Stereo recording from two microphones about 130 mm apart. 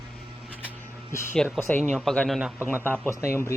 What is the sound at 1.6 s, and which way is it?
Speech, 10° left (ahead or behind).